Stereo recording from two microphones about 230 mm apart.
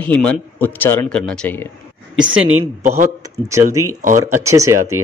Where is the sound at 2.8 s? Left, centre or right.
Right.